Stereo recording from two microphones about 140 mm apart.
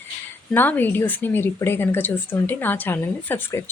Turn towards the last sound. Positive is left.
turn(degrees=15)  # may be behind; listen again after turning